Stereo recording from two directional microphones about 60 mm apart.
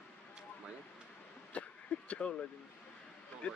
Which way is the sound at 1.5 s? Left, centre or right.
Left.